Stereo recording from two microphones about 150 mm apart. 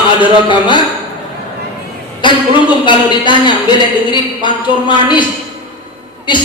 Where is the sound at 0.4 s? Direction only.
30° left (ahead or behind).